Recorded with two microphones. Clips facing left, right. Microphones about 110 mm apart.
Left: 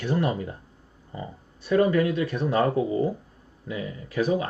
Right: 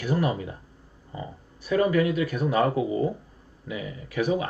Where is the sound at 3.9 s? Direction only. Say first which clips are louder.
Left 1 dB; 35° left (ahead or behind).